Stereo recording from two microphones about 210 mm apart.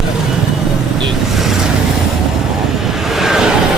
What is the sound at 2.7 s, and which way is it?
Vehicle, centre (ahead or behind).